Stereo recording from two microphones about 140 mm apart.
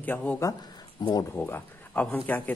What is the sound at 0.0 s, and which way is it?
Speech, 10° left (ahead or behind).